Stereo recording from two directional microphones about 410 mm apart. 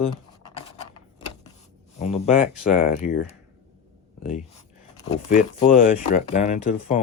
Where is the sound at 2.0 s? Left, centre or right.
Centre.